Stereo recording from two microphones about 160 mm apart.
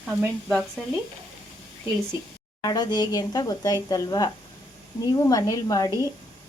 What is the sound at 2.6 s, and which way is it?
A woman's voice, 25° left (ahead or behind).